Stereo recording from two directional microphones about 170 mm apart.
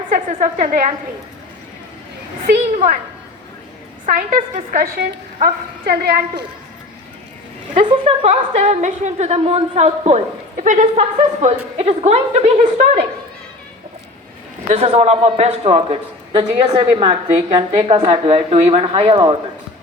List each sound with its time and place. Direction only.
0.1 s a woman's voice: 45° right (ahead or behind)
2.7 s a woman's voice: 50° right (ahead or behind)
4.0 s a woman's voice: 50° right (ahead or behind); by 6.4 s 70° right (ahead or behind)
7.8 s a woman's voice: 35° right (ahead or behind)
14.7 s a woman's voice: 35° right (ahead or behind)